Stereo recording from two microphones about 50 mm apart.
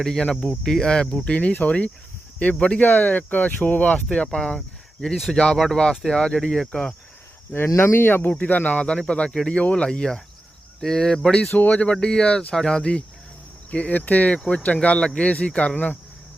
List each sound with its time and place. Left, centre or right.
0.0 s speech: centre
1.1 s speech: left
2.8 s speech: left; by 6.9 s centre
7.5 s speech: left
8.3 s speech: left; by 11.3 s centre
11.5 s speech: left
11.8 s speech: centre
13.7 s speech: left
15.7 s speech: left